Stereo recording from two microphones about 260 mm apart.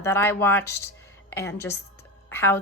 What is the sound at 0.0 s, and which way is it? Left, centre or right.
A woman's voice, centre.